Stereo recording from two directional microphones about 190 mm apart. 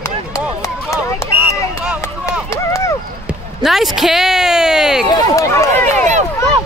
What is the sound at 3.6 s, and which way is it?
Speech, centre (ahead or behind).